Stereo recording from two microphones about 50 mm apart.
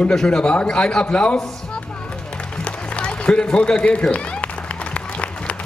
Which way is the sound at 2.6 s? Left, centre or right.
Left.